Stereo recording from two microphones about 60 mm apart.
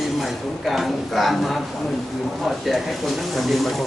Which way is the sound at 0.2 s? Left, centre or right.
Centre.